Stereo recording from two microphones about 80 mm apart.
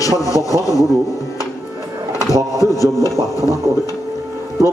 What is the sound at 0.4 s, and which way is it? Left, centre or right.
Speech, left.